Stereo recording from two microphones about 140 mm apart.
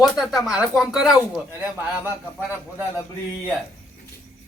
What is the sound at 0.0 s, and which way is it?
A man's voice, centre (ahead or behind).